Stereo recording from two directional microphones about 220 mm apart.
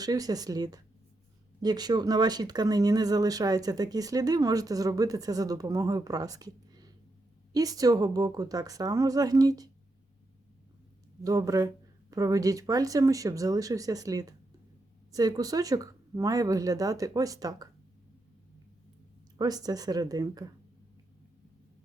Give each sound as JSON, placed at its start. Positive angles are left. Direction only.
{"t": 0.0, "sound": "speech", "side_deg": -15}
{"t": 11.2, "sound": "speech", "side_deg": -15}
{"t": 19.4, "sound": "speech", "side_deg": -15}